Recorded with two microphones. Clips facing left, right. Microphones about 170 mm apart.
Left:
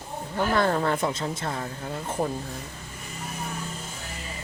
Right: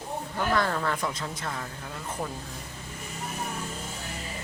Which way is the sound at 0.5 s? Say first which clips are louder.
Left 5 dB; 30° left (ahead or behind).